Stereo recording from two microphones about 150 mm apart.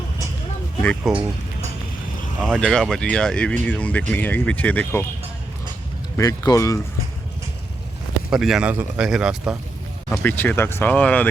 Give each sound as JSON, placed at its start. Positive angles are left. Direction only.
{"t": 0.8, "sound": "speech", "side_deg": 10}
{"t": 2.5, "sound": "a man's voice", "side_deg": 5}
{"t": 6.1, "sound": "speech", "side_deg": 25}
{"t": 8.3, "sound": "a man's voice", "side_deg": -5}
{"t": 10.1, "sound": "speech", "side_deg": 15}